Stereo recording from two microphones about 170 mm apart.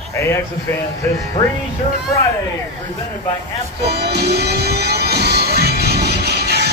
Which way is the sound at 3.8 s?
75° right (ahead or behind).